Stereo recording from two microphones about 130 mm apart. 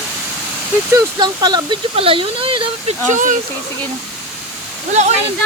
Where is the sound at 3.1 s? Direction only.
80° right.